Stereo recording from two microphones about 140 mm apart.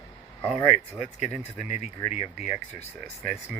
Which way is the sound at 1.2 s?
50° left (ahead or behind).